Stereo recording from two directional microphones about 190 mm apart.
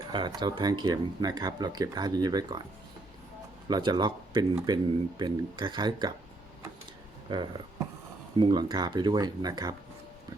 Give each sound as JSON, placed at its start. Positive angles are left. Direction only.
{"t": 0.1, "sound": "speech", "side_deg": -20}
{"t": 3.7, "sound": "speech", "side_deg": -25}
{"t": 7.3, "sound": "speech", "side_deg": -25}